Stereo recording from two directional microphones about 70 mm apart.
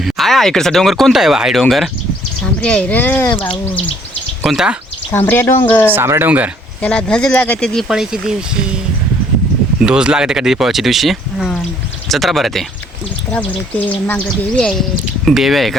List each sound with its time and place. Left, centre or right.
0.0 s speech: centre
2.6 s speech: centre
4.4 s speech: centre
5.1 s speech: left
5.9 s speech: right
6.2 s speech: right
6.8 s speech: centre
7.9 s speech: centre
9.8 s speech: centre
13.3 s speech: left
14.5 s speech: centre